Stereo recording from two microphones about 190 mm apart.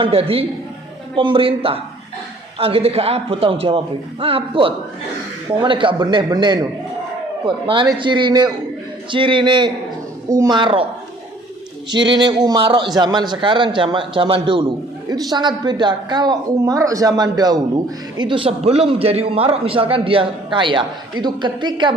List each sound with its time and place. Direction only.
0.0 s a man's voice: 30° right (ahead or behind)
11.9 s a man's voice: 25° right (ahead or behind)